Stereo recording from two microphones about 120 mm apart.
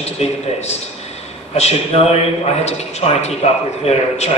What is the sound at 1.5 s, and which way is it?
A man's voice, 65° left (ahead or behind).